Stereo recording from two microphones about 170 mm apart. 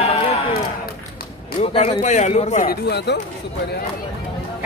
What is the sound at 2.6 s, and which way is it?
Speech, 75° left (ahead or behind).